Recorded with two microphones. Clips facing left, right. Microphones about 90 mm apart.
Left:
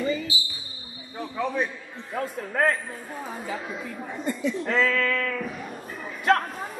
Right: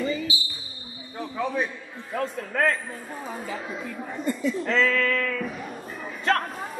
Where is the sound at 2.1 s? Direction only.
30° left (ahead or behind).